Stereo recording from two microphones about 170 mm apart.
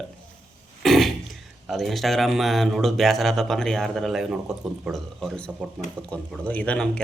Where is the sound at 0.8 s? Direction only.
Centre (ahead or behind).